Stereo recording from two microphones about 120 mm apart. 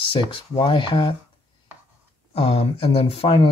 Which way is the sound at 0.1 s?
45° left (ahead or behind).